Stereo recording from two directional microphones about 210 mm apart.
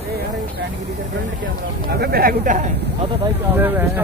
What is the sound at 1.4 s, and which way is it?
Speech, 45° right (ahead or behind).